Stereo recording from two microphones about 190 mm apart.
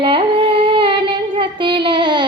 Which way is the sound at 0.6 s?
25° right (ahead or behind).